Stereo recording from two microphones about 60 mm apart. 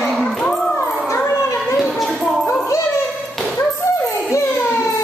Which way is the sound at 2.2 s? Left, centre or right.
Centre.